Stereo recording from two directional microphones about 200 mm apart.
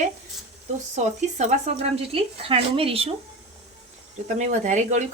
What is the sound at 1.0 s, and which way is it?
Speech, 35° right (ahead or behind).